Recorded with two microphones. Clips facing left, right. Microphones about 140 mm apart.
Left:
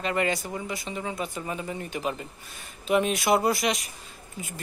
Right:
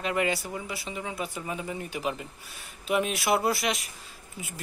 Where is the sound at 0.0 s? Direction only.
5° right (ahead or behind).